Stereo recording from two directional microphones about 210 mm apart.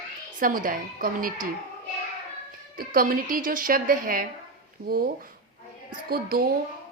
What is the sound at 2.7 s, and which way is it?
A woman's voice, 40° right (ahead or behind).